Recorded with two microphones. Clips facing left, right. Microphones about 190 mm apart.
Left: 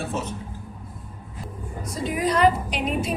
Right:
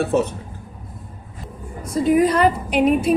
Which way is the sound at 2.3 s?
55° right (ahead or behind).